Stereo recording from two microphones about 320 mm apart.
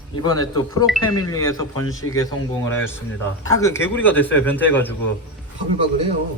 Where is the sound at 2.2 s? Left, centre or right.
Centre.